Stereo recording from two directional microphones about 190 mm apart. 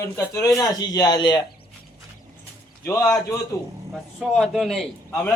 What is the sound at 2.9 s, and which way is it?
Speech, 15° left (ahead or behind).